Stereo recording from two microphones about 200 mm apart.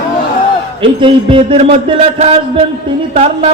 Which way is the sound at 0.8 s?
25° right (ahead or behind).